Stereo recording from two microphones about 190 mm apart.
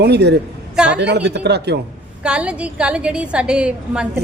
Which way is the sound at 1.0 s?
60° right (ahead or behind).